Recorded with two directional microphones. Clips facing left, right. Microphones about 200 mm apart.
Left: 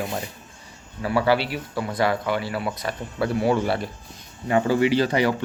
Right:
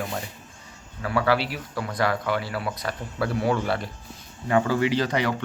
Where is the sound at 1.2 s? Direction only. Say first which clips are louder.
Left 2 dB; centre (ahead or behind).